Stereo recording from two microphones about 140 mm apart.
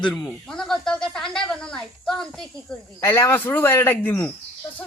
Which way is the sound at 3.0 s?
20° left (ahead or behind).